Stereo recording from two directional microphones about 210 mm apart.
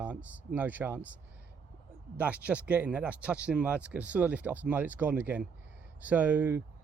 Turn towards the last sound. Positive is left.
turn(degrees=-10)  # may be behind; listen again after turning